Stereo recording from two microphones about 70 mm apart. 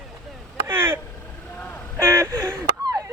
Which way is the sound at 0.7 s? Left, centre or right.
Right.